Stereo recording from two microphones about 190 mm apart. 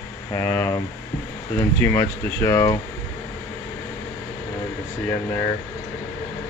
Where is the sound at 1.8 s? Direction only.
15° left (ahead or behind).